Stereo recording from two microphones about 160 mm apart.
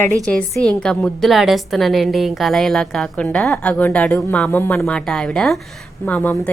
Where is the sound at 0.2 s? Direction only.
5° left (ahead or behind).